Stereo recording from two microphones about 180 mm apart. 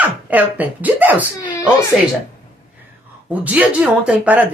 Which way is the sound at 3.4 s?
5° right (ahead or behind).